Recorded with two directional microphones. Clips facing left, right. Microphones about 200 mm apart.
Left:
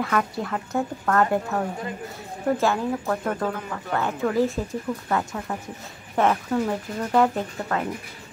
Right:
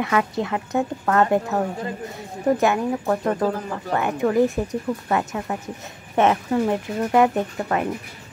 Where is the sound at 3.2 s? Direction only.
35° right (ahead or behind).